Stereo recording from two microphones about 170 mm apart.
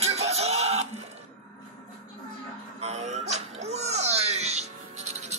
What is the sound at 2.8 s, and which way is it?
Music, 40° right (ahead or behind).